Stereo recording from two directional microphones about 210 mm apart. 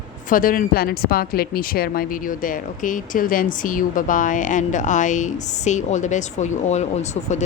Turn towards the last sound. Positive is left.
turn(degrees=35)  # may be behind; listen again after turning